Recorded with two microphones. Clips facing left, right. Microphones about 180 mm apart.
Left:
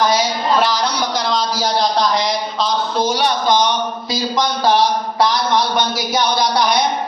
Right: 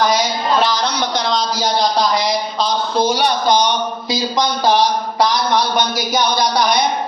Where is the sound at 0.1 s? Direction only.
10° left (ahead or behind).